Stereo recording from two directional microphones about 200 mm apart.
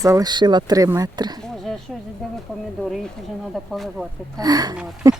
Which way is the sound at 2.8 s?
Centre (ahead or behind).